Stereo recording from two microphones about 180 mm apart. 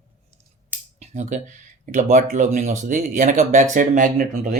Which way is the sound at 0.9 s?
40° right (ahead or behind).